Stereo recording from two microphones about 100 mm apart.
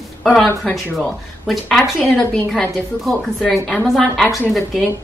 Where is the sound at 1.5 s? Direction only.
5° left (ahead or behind).